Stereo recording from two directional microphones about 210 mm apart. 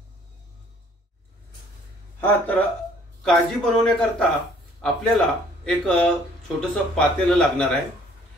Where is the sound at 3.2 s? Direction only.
Centre (ahead or behind).